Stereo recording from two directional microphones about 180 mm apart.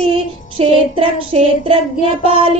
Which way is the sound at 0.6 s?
35° right (ahead or behind).